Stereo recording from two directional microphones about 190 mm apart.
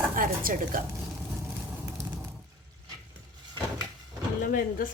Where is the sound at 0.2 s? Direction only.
50° right (ahead or behind).